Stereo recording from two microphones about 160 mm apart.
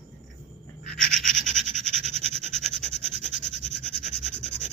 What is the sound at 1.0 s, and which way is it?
Scratch, 55° left (ahead or behind).